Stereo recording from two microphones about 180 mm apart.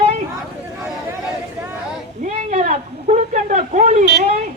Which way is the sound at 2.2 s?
40° right (ahead or behind).